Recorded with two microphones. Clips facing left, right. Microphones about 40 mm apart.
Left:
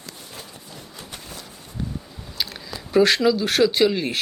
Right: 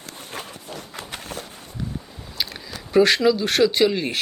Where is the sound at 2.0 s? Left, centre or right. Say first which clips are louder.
Even; centre.